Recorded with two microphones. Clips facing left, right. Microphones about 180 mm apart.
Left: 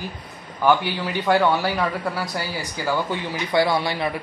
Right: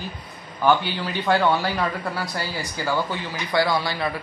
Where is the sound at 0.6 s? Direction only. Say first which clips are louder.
Left 1 dB; 15° left (ahead or behind).